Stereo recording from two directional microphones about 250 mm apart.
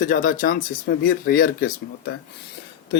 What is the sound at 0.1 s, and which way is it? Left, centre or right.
Speech, left.